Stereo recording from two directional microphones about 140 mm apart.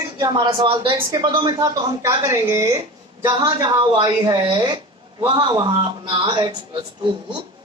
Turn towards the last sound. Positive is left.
turn(degrees=-35)  # may be behind; listen again after turning